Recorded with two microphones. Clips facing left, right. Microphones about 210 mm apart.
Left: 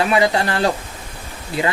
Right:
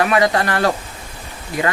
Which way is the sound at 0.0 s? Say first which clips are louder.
Right 1 dB; 25° left (ahead or behind).